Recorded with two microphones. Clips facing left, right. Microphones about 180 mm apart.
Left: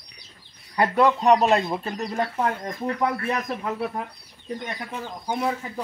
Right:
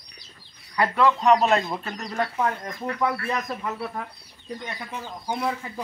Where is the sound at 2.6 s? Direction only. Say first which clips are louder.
Left 1 dB; 30° left (ahead or behind).